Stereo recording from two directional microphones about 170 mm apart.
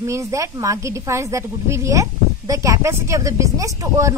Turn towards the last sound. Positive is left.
turn(degrees=-20)  # may be behind; listen again after turning